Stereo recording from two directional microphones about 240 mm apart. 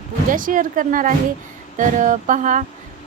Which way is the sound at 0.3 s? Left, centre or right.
Right.